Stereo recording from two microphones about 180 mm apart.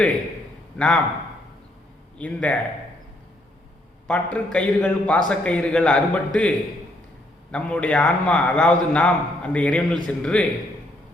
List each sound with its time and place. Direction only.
0.8 s a man's voice: 5° left (ahead or behind)
2.1 s a man's voice: 5° left (ahead or behind)
4.0 s a man's voice: 5° left (ahead or behind)
7.5 s a man's voice: 5° left (ahead or behind)